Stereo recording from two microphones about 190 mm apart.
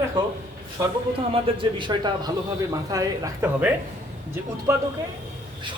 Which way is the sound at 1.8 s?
25° right (ahead or behind).